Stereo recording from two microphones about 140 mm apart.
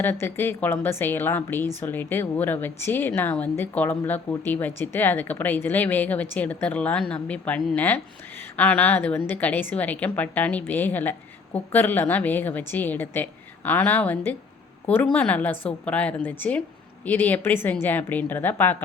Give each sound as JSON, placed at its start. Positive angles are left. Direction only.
{"t": 0.0, "sound": "a woman's voice", "side_deg": 15}